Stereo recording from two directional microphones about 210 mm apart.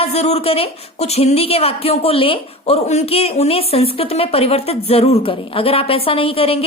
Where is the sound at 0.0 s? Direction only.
30° left (ahead or behind).